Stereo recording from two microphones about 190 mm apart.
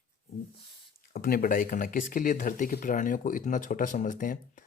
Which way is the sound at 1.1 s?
50° left (ahead or behind).